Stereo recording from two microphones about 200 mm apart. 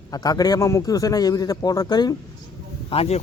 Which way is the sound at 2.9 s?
30° left (ahead or behind).